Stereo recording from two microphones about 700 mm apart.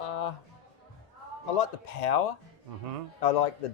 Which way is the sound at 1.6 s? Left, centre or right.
Left.